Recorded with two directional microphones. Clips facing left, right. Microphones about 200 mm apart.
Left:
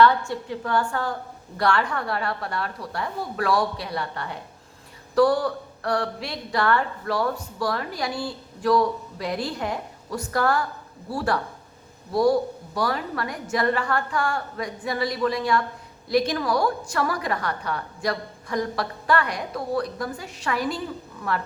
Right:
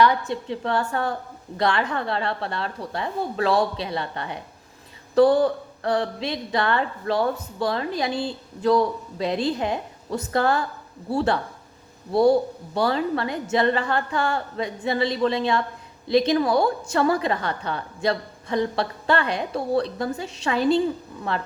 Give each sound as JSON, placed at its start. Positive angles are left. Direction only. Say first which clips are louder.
{"t": 0.0, "sound": "a woman's voice", "louder": "left 1 dB", "side_deg": -15}